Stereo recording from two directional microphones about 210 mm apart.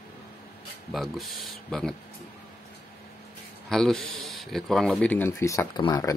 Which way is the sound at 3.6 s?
Centre (ahead or behind).